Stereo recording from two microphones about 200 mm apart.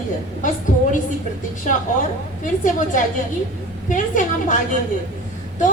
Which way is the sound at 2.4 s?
40° left (ahead or behind).